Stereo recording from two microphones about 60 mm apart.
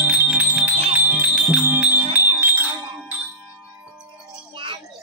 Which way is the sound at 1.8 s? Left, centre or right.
Right.